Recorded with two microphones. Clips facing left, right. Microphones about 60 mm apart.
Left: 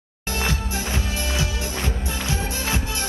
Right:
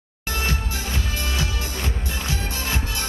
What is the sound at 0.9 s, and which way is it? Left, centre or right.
Music, left.